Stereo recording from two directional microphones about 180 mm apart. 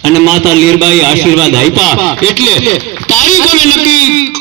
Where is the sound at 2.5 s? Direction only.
35° left (ahead or behind); by 4.3 s 55° left (ahead or behind).